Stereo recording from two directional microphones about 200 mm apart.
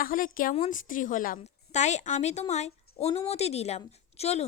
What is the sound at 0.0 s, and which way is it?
A woman's voice, 45° left (ahead or behind).